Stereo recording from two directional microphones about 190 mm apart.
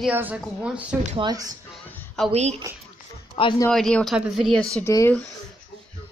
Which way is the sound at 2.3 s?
35° right (ahead or behind).